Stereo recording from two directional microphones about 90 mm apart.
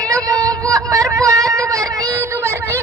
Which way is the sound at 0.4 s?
35° right (ahead or behind).